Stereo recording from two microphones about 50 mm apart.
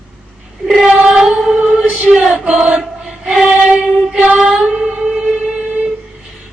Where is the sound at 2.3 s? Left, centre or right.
Right.